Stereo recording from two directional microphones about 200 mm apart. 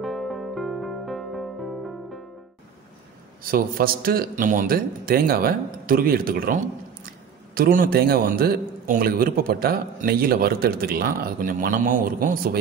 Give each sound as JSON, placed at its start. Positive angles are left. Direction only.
{"t": 0.0, "sound": "music", "side_deg": 0}
{"t": 3.4, "sound": "a man's voice", "side_deg": -45}